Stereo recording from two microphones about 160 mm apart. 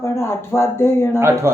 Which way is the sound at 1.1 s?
15° right (ahead or behind).